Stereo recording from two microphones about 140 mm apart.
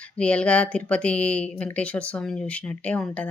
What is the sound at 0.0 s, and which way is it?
Speech, 10° left (ahead or behind).